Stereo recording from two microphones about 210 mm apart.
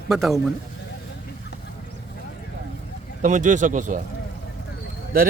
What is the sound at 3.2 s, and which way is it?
Speech, 35° right (ahead or behind).